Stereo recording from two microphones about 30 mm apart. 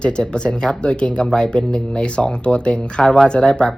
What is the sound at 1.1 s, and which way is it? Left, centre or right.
Speech, left.